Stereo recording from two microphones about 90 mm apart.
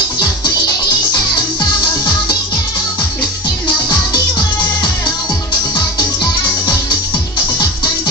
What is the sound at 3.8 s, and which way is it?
Music, 55° left (ahead or behind).